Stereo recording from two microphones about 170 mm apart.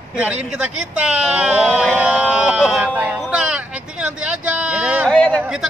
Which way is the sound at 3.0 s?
5° right (ahead or behind).